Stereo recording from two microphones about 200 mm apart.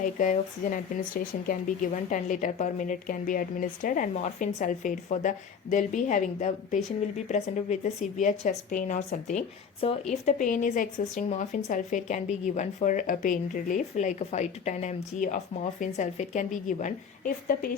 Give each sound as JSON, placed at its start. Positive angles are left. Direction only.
{"t": 0.0, "sound": "speech", "side_deg": 40}